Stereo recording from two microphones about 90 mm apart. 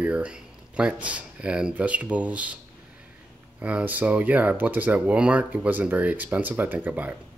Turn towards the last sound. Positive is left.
turn(degrees=-20)  # may be behind; listen again after turning